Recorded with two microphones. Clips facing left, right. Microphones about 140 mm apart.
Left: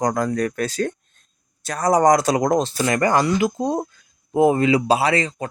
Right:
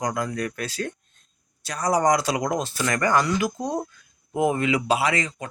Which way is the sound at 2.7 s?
30° left (ahead or behind).